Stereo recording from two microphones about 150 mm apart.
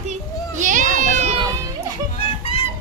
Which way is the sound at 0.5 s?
55° right (ahead or behind).